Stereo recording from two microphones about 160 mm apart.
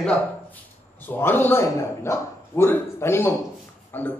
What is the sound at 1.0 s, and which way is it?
A man's voice, 15° left (ahead or behind).